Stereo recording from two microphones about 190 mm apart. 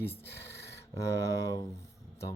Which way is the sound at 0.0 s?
60° left (ahead or behind).